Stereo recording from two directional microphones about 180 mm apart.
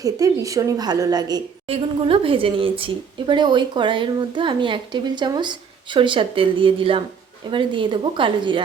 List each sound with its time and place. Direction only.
0.0 s a woman's voice: 20° right (ahead or behind)
1.6 s a woman's voice: 30° right (ahead or behind)